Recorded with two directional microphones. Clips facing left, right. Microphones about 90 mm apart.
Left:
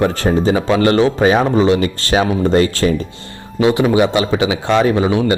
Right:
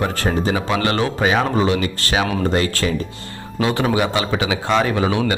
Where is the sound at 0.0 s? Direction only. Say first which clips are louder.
Left 6 dB; 30° left (ahead or behind).